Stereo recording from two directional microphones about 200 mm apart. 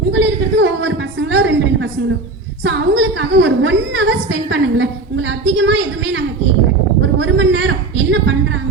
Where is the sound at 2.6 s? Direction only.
65° right (ahead or behind).